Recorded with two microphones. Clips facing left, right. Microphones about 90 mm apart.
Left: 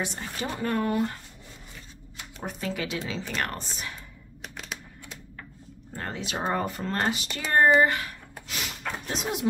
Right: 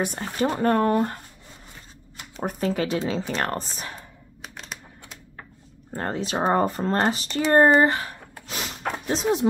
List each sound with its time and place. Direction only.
0.0 s speech: 45° right (ahead or behind)
2.4 s speech: 40° right (ahead or behind)
4.4 s a sound: centre (ahead or behind)
5.9 s speech: 35° right (ahead or behind)